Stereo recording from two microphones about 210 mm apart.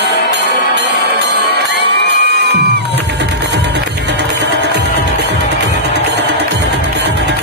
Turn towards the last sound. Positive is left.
turn(degrees=-55)  # may be behind; listen again after turning